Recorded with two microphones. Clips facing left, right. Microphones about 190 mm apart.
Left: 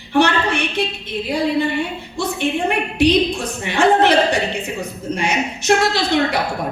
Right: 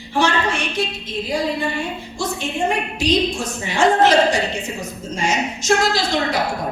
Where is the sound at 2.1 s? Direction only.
60° left (ahead or behind).